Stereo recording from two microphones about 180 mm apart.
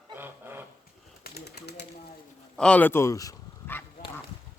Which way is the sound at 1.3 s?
65° left (ahead or behind).